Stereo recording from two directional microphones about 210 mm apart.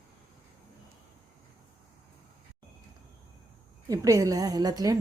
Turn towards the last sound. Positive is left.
turn(degrees=-15)  # may be behind; listen again after turning